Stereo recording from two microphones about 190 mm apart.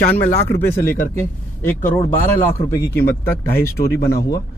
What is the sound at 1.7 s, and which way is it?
Speech, 10° left (ahead or behind).